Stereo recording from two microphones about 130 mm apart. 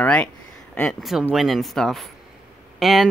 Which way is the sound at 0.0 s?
10° left (ahead or behind).